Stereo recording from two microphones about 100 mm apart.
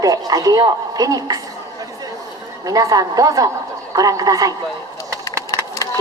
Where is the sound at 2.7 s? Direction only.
40° right (ahead or behind).